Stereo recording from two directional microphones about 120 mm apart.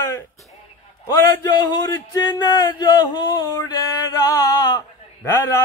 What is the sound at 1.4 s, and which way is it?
Speech, 35° left (ahead or behind).